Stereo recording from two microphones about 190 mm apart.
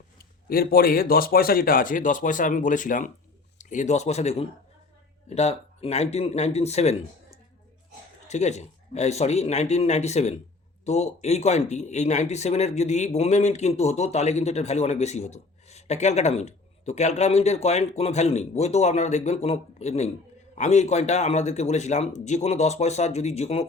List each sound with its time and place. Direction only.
0.2 s speech: 50° left (ahead or behind); by 6.9 s 35° left (ahead or behind)
8.3 s speech: 35° left (ahead or behind)